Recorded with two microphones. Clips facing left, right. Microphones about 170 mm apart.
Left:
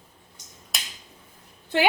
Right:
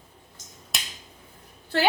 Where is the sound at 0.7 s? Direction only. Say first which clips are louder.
Right 1 dB; centre (ahead or behind).